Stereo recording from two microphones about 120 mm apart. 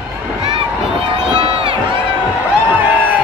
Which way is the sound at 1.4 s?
50° right (ahead or behind).